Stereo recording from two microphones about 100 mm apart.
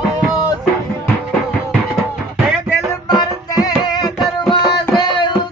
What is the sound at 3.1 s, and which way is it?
Music, 45° left (ahead or behind).